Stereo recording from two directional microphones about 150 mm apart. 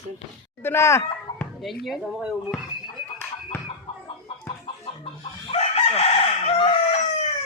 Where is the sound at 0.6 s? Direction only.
15° left (ahead or behind).